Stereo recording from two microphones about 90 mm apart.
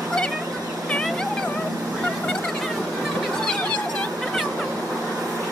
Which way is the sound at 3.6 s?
15° left (ahead or behind).